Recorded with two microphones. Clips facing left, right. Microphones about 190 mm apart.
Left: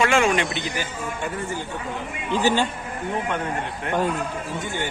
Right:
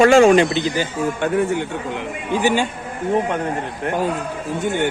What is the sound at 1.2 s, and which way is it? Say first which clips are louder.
Speech: right 11 dB; 75° right (ahead or behind).